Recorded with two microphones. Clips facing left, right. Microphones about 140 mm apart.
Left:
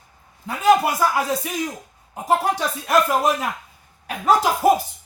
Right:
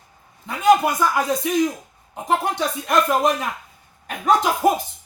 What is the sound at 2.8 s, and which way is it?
Speech, 5° left (ahead or behind).